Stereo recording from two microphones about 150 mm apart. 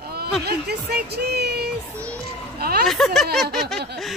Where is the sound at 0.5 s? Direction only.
90° right.